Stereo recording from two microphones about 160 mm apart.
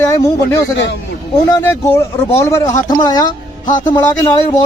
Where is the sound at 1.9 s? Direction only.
15° left (ahead or behind).